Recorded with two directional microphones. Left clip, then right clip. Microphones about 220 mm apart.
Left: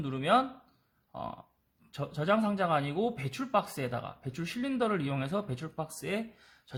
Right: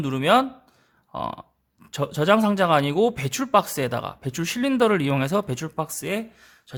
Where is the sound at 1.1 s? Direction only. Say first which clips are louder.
Right 10 dB; 35° right (ahead or behind).